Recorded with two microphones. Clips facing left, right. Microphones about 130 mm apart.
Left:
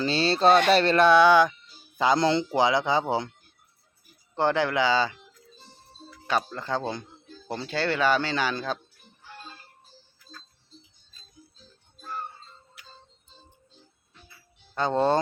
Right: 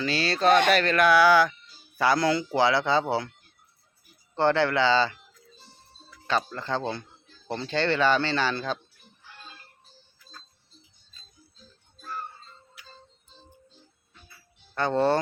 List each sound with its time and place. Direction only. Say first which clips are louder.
0.0 s speech: left 2 dB; 30° left (ahead or behind)
4.4 s speech: right 1 dB; 15° left (ahead or behind)
6.2 s speech: even; 10° left (ahead or behind)
14.8 s speech: even; 15° left (ahead or behind)